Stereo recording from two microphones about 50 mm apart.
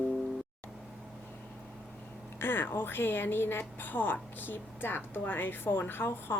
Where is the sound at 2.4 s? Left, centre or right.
Left.